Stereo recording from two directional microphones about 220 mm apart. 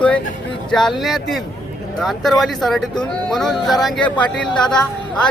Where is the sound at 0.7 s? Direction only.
Centre (ahead or behind).